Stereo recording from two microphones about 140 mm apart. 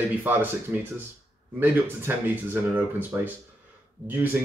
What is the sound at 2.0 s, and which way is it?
Speech, 15° right (ahead or behind).